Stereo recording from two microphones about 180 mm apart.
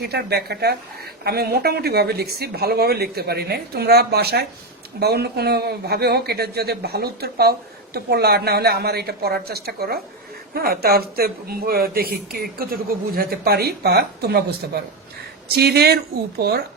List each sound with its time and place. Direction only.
0.0 s speech: 60° right (ahead or behind)